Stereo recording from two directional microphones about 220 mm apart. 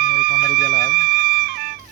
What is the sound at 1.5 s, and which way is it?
Music, 45° right (ahead or behind).